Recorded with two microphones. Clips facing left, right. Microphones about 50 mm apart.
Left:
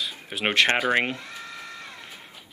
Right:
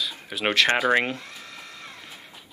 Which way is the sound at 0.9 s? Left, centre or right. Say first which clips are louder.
Right 1 dB; left.